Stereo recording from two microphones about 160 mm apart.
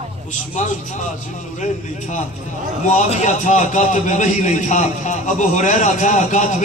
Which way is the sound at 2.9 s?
50° left (ahead or behind).